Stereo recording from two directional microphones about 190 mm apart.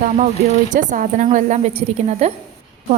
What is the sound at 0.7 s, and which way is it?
A woman's voice, 40° right (ahead or behind).